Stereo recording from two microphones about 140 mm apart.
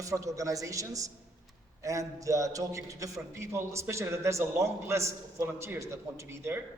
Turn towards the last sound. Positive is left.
turn(degrees=-20)  # may be behind; listen again after turning